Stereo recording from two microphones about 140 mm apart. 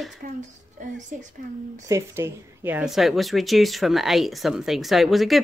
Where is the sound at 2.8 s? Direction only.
Centre (ahead or behind).